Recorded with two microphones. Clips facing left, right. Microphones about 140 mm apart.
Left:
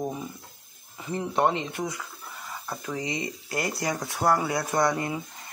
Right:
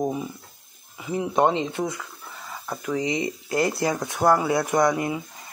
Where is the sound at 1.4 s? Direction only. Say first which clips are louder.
Right 4 dB; 20° right (ahead or behind).